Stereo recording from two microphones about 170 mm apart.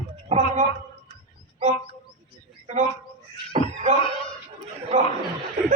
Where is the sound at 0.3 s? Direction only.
40° right (ahead or behind).